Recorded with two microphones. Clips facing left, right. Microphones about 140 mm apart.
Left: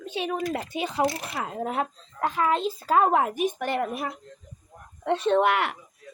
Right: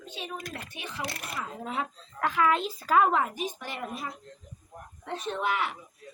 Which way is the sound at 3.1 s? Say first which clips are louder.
Left 5 dB; 55° left (ahead or behind).